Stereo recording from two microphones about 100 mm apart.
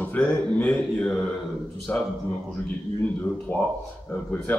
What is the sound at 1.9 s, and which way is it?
Speech, 25° left (ahead or behind).